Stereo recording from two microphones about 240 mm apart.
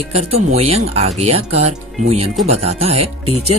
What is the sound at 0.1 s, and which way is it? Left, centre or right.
Speech, right.